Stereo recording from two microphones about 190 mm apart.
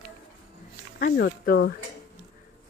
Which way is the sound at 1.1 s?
60° left (ahead or behind).